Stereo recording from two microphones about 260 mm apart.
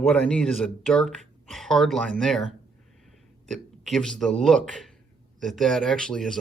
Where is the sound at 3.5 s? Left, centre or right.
Centre.